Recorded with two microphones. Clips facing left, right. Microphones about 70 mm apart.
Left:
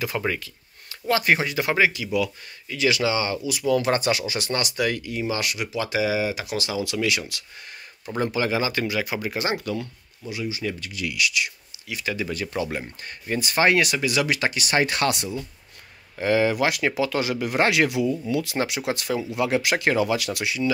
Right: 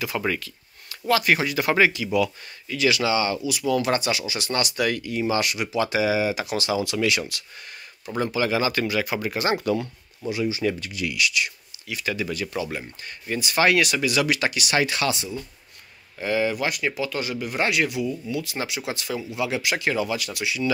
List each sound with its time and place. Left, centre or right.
0.2 s speech: centre
1.7 s speech: centre
2.7 s speech: left
4.7 s speech: centre
8.2 s speech: left
8.5 s speech: centre
10.3 s speech: right
11.1 s speech: centre
12.3 s speech: left
18.9 s speech: left